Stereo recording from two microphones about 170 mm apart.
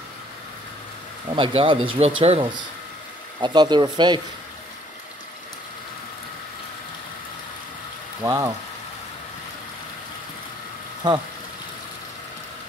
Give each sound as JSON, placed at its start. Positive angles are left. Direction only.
{"t": 1.3, "sound": "speech", "side_deg": -30}
{"t": 8.2, "sound": "speech", "side_deg": -20}
{"t": 11.0, "sound": "speech", "side_deg": -25}